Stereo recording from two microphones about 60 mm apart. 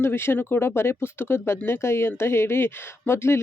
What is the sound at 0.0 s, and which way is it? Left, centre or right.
A woman's voice, left.